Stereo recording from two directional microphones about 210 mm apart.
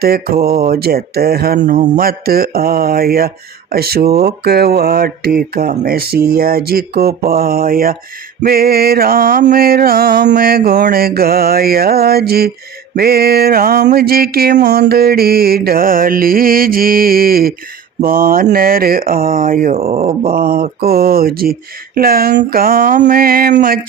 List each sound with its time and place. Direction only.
0.0 s speech: 45° right (ahead or behind)
19.7 s speech: 30° right (ahead or behind)
20.2 s speech: 45° right (ahead or behind)